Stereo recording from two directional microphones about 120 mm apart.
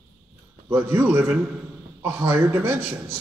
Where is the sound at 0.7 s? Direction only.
20° right (ahead or behind).